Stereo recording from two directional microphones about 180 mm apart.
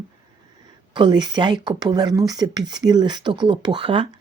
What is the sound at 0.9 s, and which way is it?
Speech, 25° right (ahead or behind).